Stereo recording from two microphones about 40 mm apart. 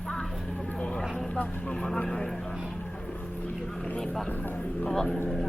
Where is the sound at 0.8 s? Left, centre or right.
Left.